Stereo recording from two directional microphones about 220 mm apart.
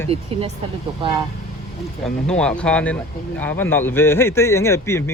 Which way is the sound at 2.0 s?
5° left (ahead or behind).